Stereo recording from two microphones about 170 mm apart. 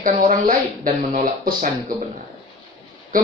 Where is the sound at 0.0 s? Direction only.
50° right (ahead or behind).